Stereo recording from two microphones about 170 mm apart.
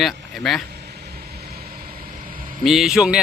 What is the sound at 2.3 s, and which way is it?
Vehicle, 55° right (ahead or behind).